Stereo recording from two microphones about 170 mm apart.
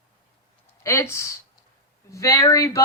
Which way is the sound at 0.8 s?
15° left (ahead or behind).